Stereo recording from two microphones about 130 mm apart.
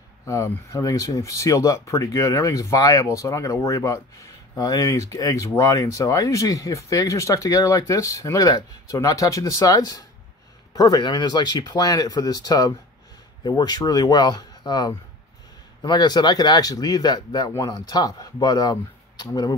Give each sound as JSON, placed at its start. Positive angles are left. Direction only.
{"t": 0.2, "sound": "speech", "side_deg": 25}